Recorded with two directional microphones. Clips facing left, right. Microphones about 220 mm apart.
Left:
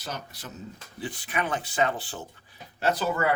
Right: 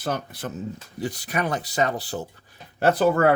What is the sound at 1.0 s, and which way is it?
Speech, 40° right (ahead or behind).